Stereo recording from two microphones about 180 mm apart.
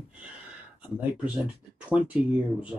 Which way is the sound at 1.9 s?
5° right (ahead or behind).